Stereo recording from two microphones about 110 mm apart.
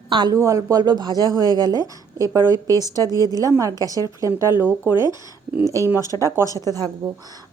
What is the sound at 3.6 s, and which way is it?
A woman's voice, 30° right (ahead or behind).